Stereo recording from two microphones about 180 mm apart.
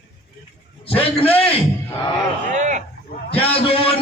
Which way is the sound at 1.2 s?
10° left (ahead or behind).